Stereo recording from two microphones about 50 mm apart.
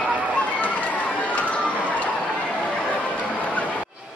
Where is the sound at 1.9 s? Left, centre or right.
Left.